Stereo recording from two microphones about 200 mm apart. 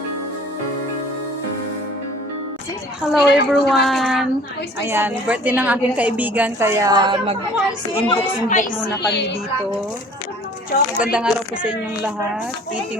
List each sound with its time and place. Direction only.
3.1 s a woman's voice: 5° right (ahead or behind)
4.8 s a woman's voice: 10° right (ahead or behind)
8.1 s a woman's voice: 40° left (ahead or behind)
11.0 s a woman's voice: 5° right (ahead or behind)